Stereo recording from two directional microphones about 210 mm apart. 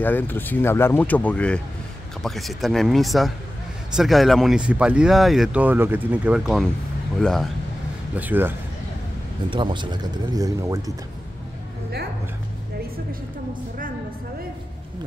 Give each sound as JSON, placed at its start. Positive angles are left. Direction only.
{"t": 0.0, "sound": "speech", "side_deg": 10}
{"t": 8.2, "sound": "speech", "side_deg": -10}
{"t": 9.5, "sound": "speech", "side_deg": -25}